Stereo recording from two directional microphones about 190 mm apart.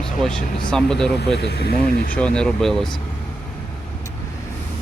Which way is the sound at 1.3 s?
60° left (ahead or behind).